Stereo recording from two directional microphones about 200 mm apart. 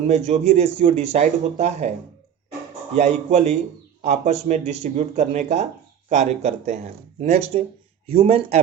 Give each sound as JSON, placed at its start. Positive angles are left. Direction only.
{"t": 0.1, "sound": "speech", "side_deg": -35}
{"t": 2.9, "sound": "speech", "side_deg": -35}